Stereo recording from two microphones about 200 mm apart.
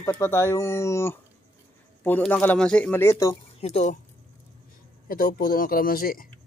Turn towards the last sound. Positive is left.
turn(degrees=45)  # may be behind; listen again after turning